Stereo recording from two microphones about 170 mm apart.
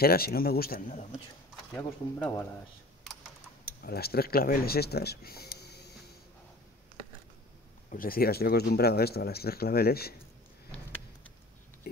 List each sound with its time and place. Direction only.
0.0 s speech: 65° left (ahead or behind)
1.8 s speech: 10° left (ahead or behind)
3.8 s speech: 65° left (ahead or behind)
7.9 s speech: 60° left (ahead or behind)